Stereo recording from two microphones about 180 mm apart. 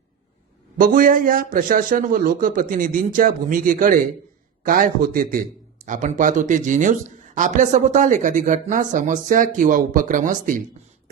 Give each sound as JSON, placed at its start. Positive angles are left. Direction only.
{"t": 0.8, "sound": "speech", "side_deg": -50}